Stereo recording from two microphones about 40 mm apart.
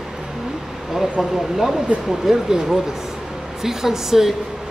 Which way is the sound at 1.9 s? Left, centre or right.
Right.